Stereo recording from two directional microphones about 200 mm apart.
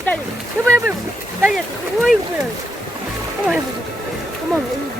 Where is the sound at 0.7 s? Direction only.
10° right (ahead or behind).